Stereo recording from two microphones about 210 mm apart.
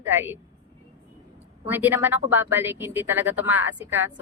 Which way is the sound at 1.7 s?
10° right (ahead or behind).